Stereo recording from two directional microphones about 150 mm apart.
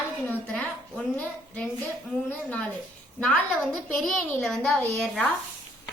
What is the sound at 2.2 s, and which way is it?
Speech, 10° left (ahead or behind).